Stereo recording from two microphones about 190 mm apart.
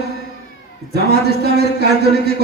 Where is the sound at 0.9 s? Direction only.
60° right (ahead or behind).